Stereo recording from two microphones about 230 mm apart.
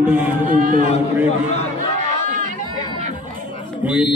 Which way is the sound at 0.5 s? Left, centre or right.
Right.